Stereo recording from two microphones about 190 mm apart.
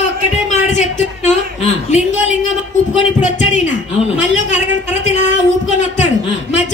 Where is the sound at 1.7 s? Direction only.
35° left (ahead or behind).